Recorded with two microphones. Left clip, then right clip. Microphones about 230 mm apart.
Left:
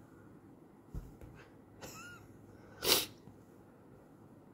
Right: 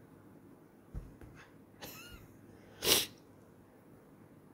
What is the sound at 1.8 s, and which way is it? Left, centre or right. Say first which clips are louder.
Vehicle: even; centre.